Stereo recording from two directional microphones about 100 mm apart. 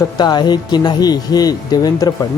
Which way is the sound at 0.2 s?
45° left (ahead or behind).